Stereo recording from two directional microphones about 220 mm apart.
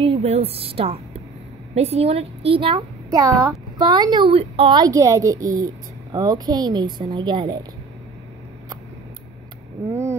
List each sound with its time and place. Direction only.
0.0 s a woman's voice: 30° right (ahead or behind)
9.8 s vehicle: 10° right (ahead or behind)